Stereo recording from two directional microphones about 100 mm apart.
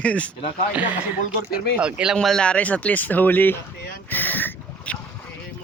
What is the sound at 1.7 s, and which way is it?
Speech, 10° right (ahead or behind).